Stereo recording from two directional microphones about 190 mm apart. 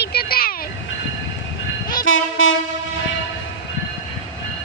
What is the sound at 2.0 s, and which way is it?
Train, 90° left.